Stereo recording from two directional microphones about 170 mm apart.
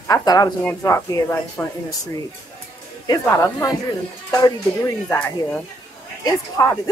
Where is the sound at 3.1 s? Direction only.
20° left (ahead or behind).